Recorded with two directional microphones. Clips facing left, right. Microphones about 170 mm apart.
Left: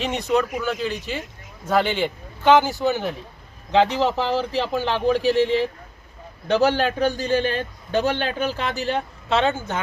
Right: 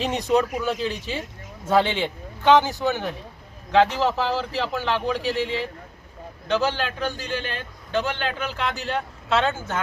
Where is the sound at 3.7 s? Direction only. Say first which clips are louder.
Left 1 dB; 20° left (ahead or behind).